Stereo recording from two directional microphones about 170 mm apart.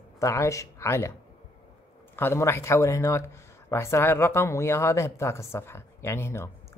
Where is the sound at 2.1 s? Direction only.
15° left (ahead or behind).